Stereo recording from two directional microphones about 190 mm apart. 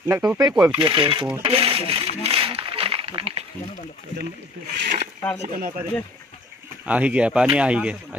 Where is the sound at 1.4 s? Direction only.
30° right (ahead or behind).